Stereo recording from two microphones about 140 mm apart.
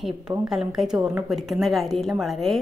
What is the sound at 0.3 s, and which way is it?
Speech, 10° right (ahead or behind).